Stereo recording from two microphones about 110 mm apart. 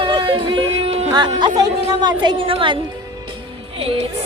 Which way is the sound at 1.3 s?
40° right (ahead or behind).